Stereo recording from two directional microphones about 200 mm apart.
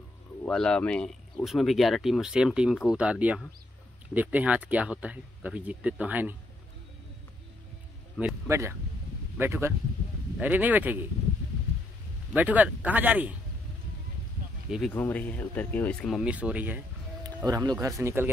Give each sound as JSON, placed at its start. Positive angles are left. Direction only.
{"t": 0.5, "sound": "speech", "side_deg": 5}
{"t": 8.5, "sound": "speech", "side_deg": -15}
{"t": 12.3, "sound": "speech", "side_deg": -10}
{"t": 14.7, "sound": "speech", "side_deg": 5}
{"t": 17.5, "sound": "speech", "side_deg": -20}